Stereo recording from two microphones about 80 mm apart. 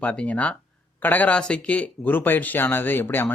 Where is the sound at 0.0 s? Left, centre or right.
Centre.